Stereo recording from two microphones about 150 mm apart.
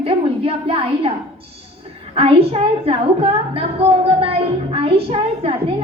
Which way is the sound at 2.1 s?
40° right (ahead or behind).